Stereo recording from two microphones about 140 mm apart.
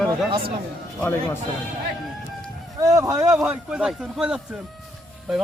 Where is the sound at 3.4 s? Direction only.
5° right (ahead or behind).